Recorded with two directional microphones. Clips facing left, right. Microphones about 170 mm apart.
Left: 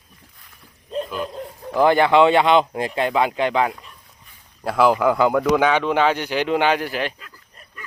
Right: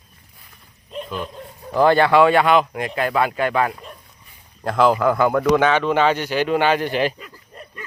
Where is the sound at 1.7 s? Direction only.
15° left (ahead or behind).